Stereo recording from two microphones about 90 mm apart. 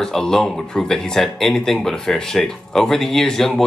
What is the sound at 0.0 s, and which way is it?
Speech, 5° left (ahead or behind).